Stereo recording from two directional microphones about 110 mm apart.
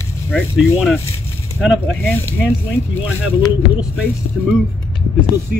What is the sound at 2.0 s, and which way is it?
Speech, 20° left (ahead or behind).